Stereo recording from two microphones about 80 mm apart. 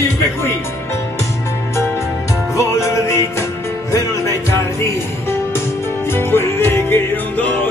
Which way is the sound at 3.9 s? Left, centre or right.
Left.